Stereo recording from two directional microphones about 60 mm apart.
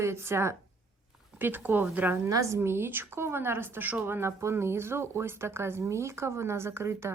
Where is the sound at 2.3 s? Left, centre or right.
Right.